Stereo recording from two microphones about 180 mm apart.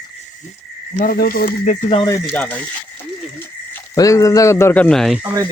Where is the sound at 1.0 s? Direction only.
55° left (ahead or behind).